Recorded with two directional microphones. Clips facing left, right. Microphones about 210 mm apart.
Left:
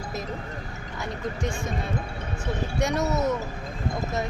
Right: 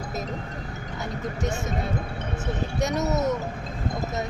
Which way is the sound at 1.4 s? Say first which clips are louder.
Right 1 dB; 20° right (ahead or behind).